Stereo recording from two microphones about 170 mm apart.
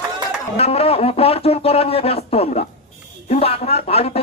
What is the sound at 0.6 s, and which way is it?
Speech, 35° left (ahead or behind).